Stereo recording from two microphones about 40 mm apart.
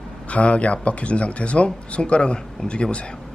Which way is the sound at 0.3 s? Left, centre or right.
Left.